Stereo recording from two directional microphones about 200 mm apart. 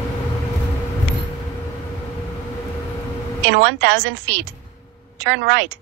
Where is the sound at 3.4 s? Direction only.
65° right (ahead or behind).